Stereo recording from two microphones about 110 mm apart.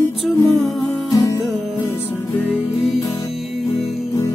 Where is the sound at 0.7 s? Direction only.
35° left (ahead or behind).